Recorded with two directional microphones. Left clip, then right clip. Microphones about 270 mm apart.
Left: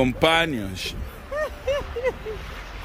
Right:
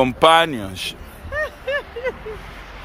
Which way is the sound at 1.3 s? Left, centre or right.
Left.